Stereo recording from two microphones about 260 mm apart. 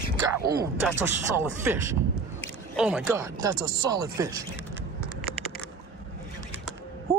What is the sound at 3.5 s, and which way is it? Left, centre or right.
Speech, right.